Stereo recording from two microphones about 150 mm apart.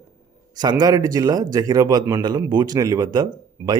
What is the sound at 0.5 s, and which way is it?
Speech, 30° right (ahead or behind).